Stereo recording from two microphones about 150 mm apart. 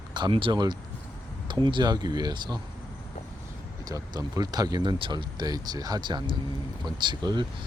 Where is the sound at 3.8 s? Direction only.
25° right (ahead or behind).